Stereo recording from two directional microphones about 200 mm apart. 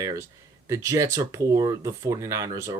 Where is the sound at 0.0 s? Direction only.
15° right (ahead or behind).